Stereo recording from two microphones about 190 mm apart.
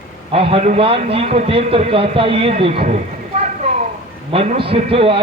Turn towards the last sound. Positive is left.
turn(degrees=-30)  # may be behind; listen again after turning